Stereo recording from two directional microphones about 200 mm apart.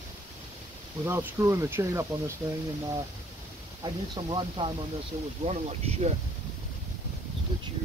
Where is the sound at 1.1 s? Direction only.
10° right (ahead or behind).